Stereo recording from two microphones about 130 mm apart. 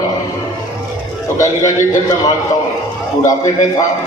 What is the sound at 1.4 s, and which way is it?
A man's voice, 25° left (ahead or behind).